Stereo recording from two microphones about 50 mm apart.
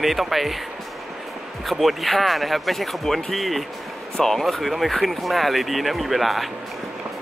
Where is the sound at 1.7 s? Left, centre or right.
Centre.